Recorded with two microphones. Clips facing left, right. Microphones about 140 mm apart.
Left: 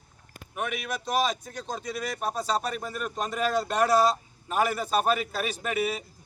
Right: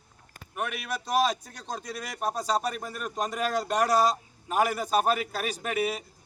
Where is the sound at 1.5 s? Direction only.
5° left (ahead or behind).